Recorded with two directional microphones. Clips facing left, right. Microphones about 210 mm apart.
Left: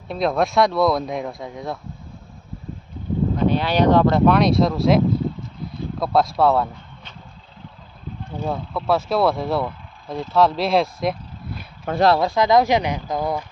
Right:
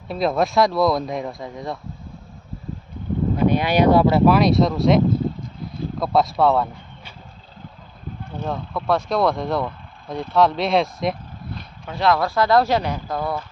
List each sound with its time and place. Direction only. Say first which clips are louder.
0.1 s speech: even; centre (ahead or behind)
3.3 s speech: right 2 dB; 10° right (ahead or behind)
8.4 s speech: left 1 dB; 5° left (ahead or behind)
11.9 s speech: left 3 dB; 45° left (ahead or behind)
12.1 s speech: left 1 dB; 20° left (ahead or behind)